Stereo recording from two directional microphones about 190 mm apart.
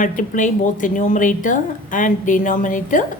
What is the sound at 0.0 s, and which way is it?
A woman's voice, 45° left (ahead or behind).